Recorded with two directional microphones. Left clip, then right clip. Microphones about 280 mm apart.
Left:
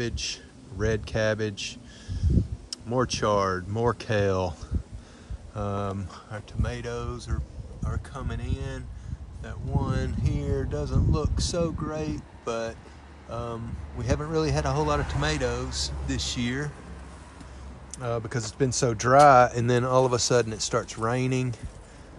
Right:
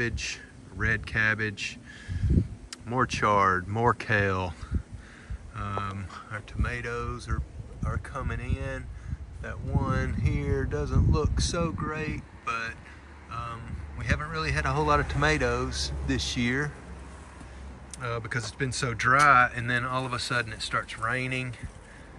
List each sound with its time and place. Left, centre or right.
0.7 s speech: centre
17.9 s speech: centre